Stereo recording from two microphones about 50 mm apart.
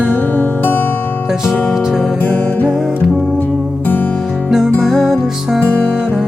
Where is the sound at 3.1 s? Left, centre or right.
Centre.